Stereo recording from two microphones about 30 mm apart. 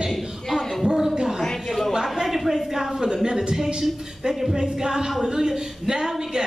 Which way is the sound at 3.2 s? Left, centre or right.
Centre.